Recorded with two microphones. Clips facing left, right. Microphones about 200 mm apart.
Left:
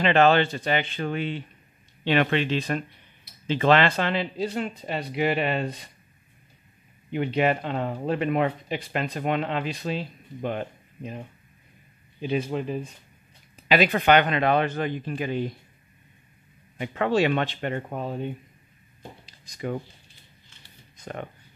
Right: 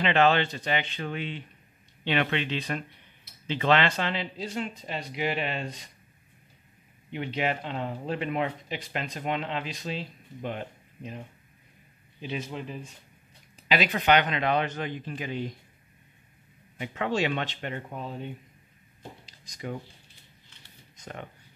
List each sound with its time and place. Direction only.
0.0 s speech: 45° left (ahead or behind)
7.1 s speech: 50° left (ahead or behind)
12.2 s speech: 50° left (ahead or behind)
16.7 s speech: 50° left (ahead or behind)
19.2 s a sound: 55° left (ahead or behind)
21.0 s speech: 55° left (ahead or behind)